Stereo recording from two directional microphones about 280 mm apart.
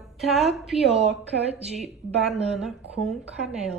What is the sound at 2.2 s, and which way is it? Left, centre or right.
A woman's voice, centre.